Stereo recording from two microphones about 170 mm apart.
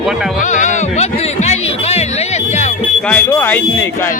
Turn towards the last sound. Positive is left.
turn(degrees=10)  # may be behind; listen again after turning